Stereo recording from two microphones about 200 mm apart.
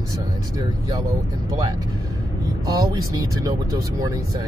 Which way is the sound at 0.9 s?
20° right (ahead or behind).